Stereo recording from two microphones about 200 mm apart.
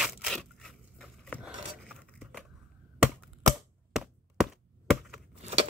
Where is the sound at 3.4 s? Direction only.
Centre (ahead or behind).